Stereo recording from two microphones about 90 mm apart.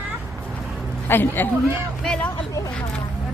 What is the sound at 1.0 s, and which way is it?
Speech, 25° left (ahead or behind).